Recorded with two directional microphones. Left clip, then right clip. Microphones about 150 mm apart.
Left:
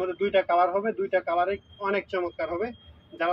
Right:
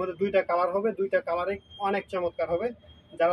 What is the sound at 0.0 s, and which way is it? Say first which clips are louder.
Speech: left 1 dB; 55° right (ahead or behind).